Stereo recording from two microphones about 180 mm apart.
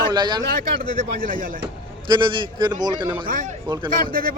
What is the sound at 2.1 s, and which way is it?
Speech, 25° right (ahead or behind).